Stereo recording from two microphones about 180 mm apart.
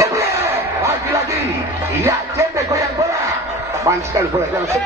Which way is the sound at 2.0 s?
15° right (ahead or behind).